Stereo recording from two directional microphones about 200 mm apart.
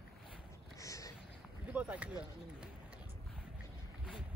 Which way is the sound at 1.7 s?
5° right (ahead or behind).